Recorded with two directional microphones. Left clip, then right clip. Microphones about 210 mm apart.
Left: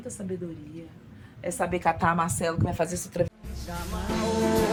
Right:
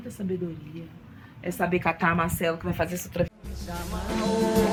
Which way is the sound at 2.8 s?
Centre (ahead or behind).